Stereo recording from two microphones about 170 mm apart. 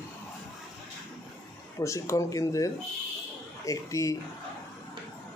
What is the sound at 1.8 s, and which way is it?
Speech, 15° left (ahead or behind).